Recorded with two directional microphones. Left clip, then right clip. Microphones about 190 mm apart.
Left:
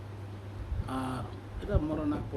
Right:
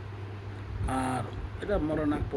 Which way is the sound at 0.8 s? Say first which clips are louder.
Right 5 dB; centre (ahead or behind).